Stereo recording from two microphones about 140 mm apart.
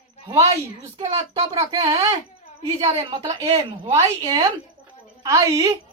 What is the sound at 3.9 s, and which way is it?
A woman's voice, 25° right (ahead or behind).